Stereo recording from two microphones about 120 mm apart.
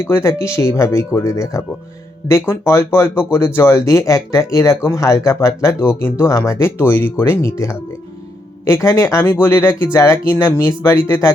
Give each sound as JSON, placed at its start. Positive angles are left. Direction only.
{"t": 0.0, "sound": "speech", "side_deg": 20}